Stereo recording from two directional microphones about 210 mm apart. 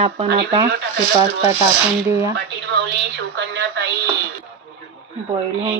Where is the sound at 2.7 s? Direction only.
55° right (ahead or behind).